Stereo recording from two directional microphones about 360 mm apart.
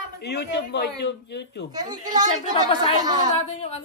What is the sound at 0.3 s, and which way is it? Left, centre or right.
Speech, left.